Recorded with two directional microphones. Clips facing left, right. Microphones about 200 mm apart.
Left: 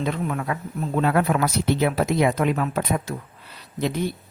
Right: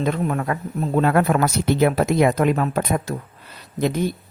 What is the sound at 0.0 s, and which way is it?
Speech, 45° right (ahead or behind).